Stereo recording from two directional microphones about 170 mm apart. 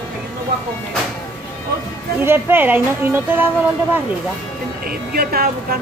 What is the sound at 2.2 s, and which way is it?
A woman's voice, 15° right (ahead or behind).